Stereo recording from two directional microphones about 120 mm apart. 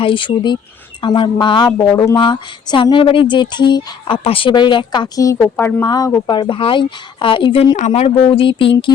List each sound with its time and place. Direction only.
0.0 s speech: 45° left (ahead or behind)
1.8 s speech: 25° left (ahead or behind)
2.1 s speech: 40° left (ahead or behind)
5.4 s a woman's voice: 15° left (ahead or behind)
5.8 s speech: 35° left (ahead or behind)
7.8 s speech: 90° left
8.0 s speech: 45° left (ahead or behind)